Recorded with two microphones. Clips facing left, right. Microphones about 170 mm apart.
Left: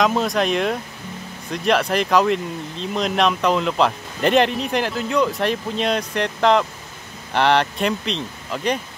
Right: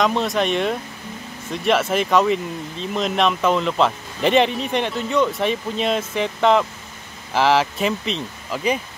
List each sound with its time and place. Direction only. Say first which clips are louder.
0.0 s speech: left 1 dB; centre (ahead or behind)